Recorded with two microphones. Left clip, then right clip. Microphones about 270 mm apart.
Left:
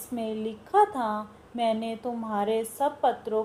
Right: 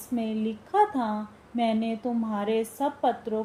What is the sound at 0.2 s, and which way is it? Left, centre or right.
A woman's voice, left.